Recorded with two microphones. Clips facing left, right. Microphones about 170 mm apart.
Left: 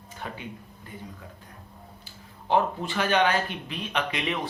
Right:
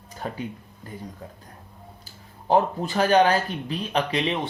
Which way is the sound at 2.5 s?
40° right (ahead or behind).